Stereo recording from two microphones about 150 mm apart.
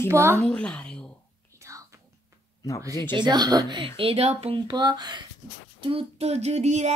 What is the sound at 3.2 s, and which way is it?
Speech, 30° right (ahead or behind).